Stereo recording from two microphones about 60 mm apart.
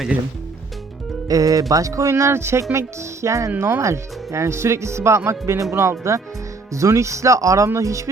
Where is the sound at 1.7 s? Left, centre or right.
Right.